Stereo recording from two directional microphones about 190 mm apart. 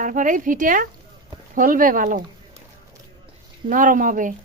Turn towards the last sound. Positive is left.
turn(degrees=-45)  # may be behind; listen again after turning